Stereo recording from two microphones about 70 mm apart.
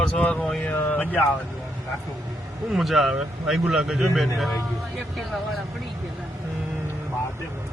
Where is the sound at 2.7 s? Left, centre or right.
Centre.